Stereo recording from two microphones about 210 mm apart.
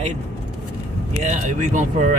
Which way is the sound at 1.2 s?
35° right (ahead or behind).